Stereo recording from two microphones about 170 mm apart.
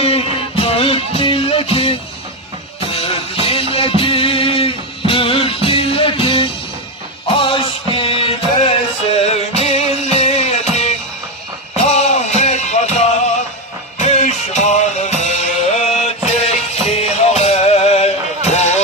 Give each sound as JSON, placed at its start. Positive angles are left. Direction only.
{"t": 0.0, "sound": "music", "side_deg": 35}